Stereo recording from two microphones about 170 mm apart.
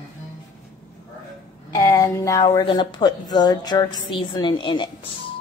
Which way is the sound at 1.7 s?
20° left (ahead or behind).